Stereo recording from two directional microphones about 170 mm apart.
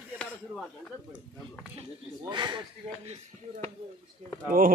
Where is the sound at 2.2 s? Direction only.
25° right (ahead or behind).